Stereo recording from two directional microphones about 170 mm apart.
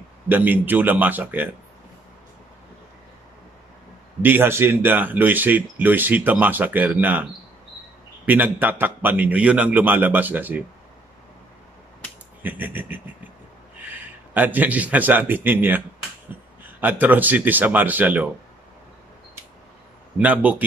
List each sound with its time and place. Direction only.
0.3 s speech: 10° right (ahead or behind)
4.2 s speech: 10° right (ahead or behind)
8.3 s speech: 10° right (ahead or behind)
12.4 s a man's voice: 10° right (ahead or behind)
20.2 s speech: 10° right (ahead or behind)